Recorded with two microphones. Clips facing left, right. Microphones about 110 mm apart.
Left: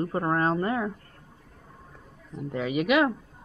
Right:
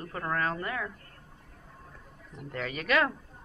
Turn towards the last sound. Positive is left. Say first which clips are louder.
# left 5 dB
turn(degrees=15)  # may be behind; listen again after turning